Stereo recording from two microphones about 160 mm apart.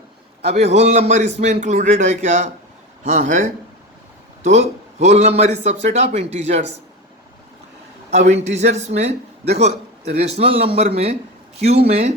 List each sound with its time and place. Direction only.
0.5 s a man's voice: 45° right (ahead or behind)
8.1 s a man's voice: 45° right (ahead or behind)
10.2 s speech: 40° right (ahead or behind)